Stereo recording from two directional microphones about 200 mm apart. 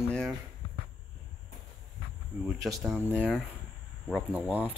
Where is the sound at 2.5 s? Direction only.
10° right (ahead or behind).